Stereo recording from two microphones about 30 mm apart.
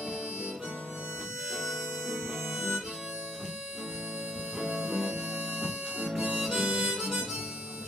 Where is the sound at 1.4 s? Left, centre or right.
Centre.